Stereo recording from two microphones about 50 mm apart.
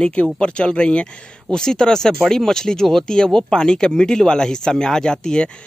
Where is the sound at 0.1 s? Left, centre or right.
Left.